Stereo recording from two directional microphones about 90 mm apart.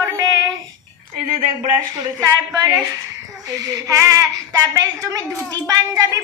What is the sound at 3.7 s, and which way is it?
A woman's voice, 40° right (ahead or behind).